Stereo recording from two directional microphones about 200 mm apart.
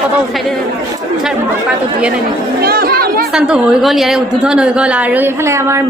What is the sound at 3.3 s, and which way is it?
A woman's voice, 5° right (ahead or behind).